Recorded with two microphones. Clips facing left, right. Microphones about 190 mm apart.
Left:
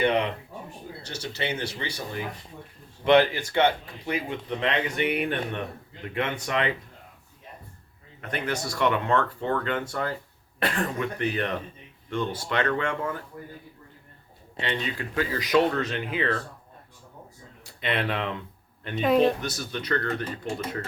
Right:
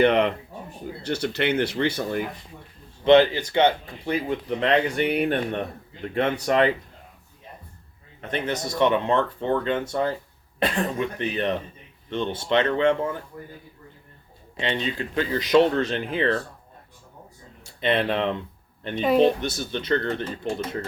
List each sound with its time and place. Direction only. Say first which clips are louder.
1.0 s speech: right 8 dB; 60° right (ahead or behind)
3.0 s speech: right 4 dB; 25° right (ahead or behind)
4.0 s speech: right 4 dB; 35° right (ahead or behind)
8.2 s speech: right 3 dB; 20° right (ahead or behind)
14.6 s speech: right 3 dB; 25° right (ahead or behind)
17.7 s speech: right 5 dB; 25° right (ahead or behind)
18.9 s speech: right 2 dB; centre (ahead or behind)
19.4 s speech: right 4 dB; 25° right (ahead or behind)